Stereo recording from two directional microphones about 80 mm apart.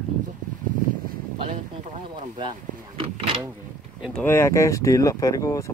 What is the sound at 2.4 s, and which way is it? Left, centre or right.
Door, right.